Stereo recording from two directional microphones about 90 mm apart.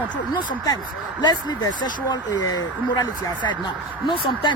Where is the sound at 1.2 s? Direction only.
50° left (ahead or behind).